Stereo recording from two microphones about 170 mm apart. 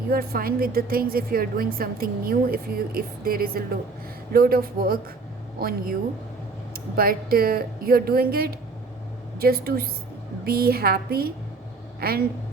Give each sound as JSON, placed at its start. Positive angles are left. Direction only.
{"t": 0.1, "sound": "a woman's voice", "side_deg": -60}